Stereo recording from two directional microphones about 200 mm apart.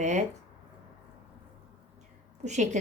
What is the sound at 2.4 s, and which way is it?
Speech, 35° right (ahead or behind).